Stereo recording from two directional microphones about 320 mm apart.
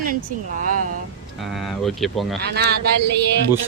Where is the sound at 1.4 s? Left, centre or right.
Centre.